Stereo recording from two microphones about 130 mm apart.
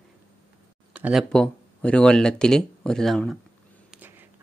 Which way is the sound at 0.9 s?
10° right (ahead or behind).